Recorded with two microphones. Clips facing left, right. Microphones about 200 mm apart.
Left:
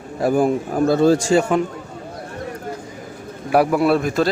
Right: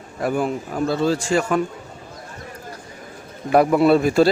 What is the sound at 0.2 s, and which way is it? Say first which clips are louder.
A man's voice: left 5 dB; 40° left (ahead or behind).